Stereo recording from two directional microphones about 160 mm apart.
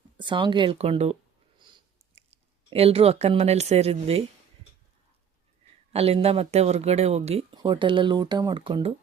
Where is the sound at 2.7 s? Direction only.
40° right (ahead or behind).